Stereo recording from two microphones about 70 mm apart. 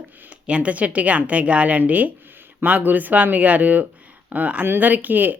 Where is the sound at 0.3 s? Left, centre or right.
Centre.